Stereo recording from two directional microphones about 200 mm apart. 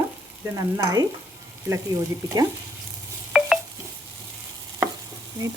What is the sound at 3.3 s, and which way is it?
Dishes, centre (ahead or behind).